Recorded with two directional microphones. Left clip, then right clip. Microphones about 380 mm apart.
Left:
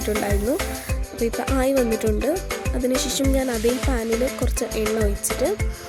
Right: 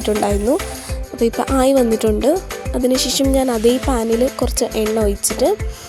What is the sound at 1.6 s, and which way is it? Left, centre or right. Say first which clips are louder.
Speech: right 7 dB; left.